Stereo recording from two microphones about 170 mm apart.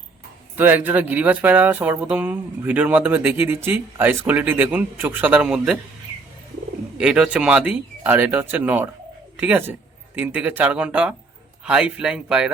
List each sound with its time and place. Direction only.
0.5 s speech: 10° right (ahead or behind)
7.0 s speech: 5° right (ahead or behind)